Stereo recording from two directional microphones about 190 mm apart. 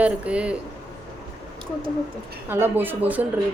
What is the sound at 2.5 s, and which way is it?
Speech, 10° right (ahead or behind).